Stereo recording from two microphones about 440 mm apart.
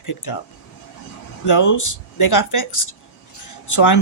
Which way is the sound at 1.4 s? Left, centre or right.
Left.